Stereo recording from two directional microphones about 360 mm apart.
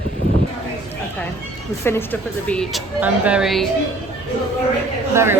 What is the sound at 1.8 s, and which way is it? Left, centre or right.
A woman's voice, centre.